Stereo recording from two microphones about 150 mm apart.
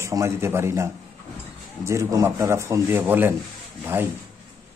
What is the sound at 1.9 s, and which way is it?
A man's voice, 20° right (ahead or behind).